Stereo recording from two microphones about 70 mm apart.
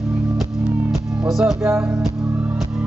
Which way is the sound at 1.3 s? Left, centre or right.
Centre.